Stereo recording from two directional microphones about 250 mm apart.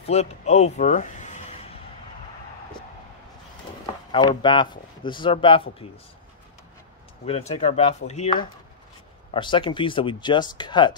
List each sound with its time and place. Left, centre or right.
0.0 s a sound: left
4.1 s speech: centre
7.2 s speech: left